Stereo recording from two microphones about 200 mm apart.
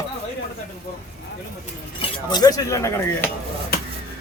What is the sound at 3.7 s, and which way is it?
Vehicle, 50° left (ahead or behind).